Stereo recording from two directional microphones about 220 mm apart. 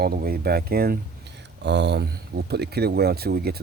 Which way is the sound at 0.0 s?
45° right (ahead or behind).